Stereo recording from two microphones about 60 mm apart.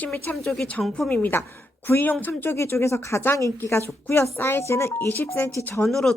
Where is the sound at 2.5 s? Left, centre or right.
Left.